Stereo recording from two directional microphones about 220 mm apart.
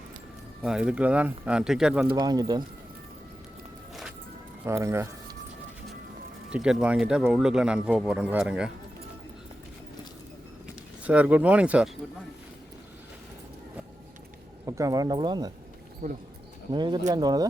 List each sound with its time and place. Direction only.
0.6 s speech: 5° right (ahead or behind)
2.0 s speech: 20° right (ahead or behind)
4.6 s speech: 10° right (ahead or behind)
6.5 s speech: 5° right (ahead or behind)
11.0 s speech: 5° right (ahead or behind)
14.7 s speech: 15° right (ahead or behind)
16.0 s speech: 35° right (ahead or behind)
16.7 s speech: 20° right (ahead or behind)